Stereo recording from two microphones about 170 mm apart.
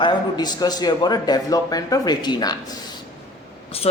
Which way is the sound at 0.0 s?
25° left (ahead or behind).